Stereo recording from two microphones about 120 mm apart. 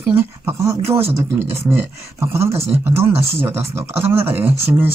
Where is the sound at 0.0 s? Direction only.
20° right (ahead or behind).